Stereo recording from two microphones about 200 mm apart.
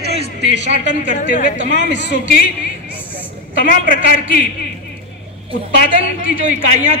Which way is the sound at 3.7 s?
45° left (ahead or behind).